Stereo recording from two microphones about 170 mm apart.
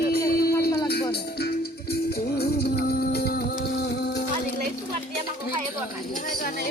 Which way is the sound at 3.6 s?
70° left (ahead or behind).